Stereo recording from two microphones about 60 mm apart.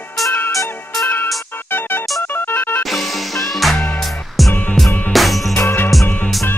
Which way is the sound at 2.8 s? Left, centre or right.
Centre.